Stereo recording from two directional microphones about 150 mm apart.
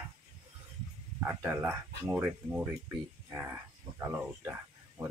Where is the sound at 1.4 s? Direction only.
10° right (ahead or behind).